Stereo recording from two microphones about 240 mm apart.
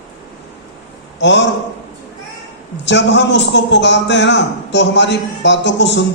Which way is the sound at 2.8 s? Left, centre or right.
Left.